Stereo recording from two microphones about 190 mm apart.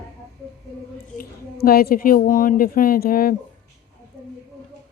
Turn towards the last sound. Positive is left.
turn(degrees=50)  # may be behind; listen again after turning